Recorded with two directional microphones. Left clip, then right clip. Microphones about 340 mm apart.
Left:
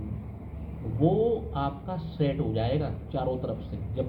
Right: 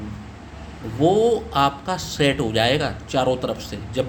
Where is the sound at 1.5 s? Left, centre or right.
Right.